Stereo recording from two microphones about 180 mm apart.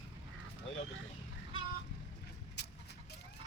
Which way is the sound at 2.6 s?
65° left (ahead or behind).